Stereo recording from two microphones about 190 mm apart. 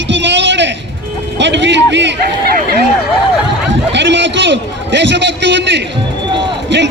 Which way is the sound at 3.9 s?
70° right (ahead or behind).